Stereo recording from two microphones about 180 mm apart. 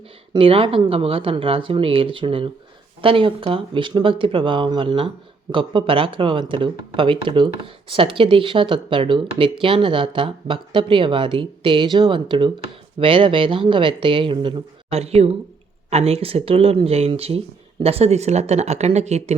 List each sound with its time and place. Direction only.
0.3 s speech: 30° right (ahead or behind)